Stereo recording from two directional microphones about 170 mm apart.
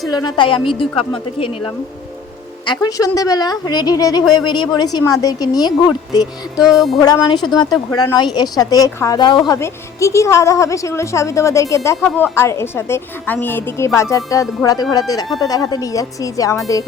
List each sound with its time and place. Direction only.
0.1 s speech: 25° left (ahead or behind)
6.6 s music: centre (ahead or behind)
7.0 s a woman's voice: 25° left (ahead or behind)
11.9 s a woman's voice: 5° left (ahead or behind)